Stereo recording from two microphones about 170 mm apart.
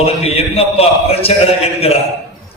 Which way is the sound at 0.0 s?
35° left (ahead or behind).